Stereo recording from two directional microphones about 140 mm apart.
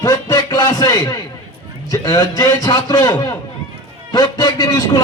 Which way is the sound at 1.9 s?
25° left (ahead or behind).